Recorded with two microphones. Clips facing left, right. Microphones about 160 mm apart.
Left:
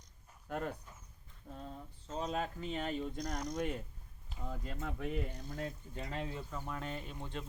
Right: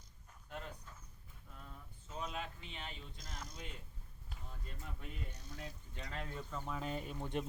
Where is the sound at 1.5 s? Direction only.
35° left (ahead or behind).